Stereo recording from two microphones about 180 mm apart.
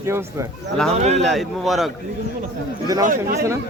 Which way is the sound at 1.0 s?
35° right (ahead or behind).